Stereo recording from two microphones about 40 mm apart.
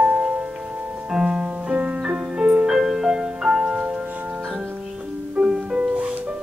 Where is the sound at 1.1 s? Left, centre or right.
Centre.